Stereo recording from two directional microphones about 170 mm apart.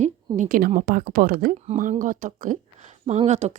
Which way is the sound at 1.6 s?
45° right (ahead or behind).